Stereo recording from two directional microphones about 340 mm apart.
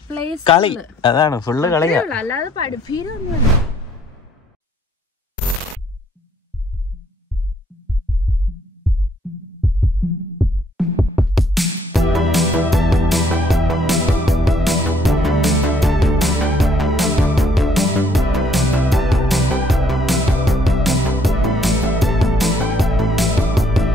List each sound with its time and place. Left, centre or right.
0.1 s speech: centre
8.8 s music: centre
10.4 s music: centre